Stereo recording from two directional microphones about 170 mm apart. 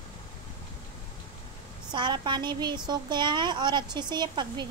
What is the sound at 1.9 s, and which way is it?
A woman's voice, 25° right (ahead or behind).